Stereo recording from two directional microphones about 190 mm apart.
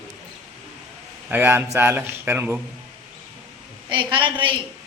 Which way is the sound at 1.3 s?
10° right (ahead or behind).